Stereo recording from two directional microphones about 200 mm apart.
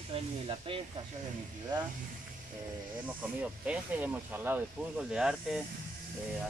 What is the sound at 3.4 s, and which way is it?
Speech, 5° right (ahead or behind).